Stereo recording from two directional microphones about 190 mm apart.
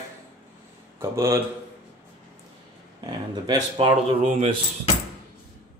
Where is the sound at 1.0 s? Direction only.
15° right (ahead or behind).